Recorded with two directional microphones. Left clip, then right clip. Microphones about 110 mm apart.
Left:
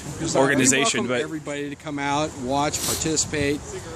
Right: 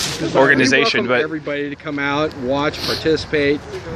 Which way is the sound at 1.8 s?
45° left (ahead or behind).